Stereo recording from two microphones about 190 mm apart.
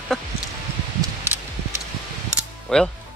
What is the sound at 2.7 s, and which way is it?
Speech, 5° left (ahead or behind).